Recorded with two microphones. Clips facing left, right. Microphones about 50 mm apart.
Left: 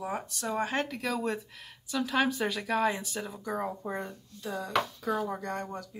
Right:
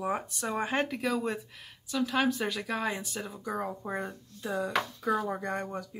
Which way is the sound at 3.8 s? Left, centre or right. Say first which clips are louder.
Right 1 dB; centre.